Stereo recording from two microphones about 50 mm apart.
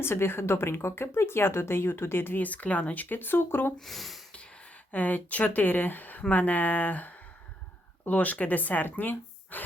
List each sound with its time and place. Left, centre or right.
0.0 s speech: left
2.4 s speech: left
3.8 s speech: centre
4.9 s speech: left